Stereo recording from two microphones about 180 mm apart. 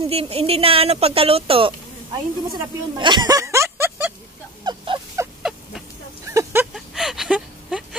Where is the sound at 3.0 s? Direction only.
25° right (ahead or behind).